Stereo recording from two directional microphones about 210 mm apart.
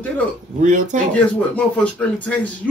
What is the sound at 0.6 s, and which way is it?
Speech, 35° right (ahead or behind).